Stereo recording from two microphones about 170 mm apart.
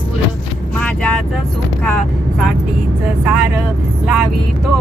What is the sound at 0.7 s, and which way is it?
Speech, 10° left (ahead or behind).